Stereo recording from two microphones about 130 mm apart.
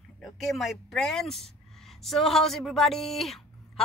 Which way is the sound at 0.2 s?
Centre (ahead or behind).